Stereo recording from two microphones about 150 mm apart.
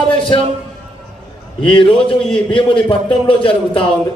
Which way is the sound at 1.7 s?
35° left (ahead or behind).